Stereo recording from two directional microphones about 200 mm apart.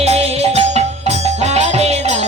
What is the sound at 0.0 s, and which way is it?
Music, 30° right (ahead or behind).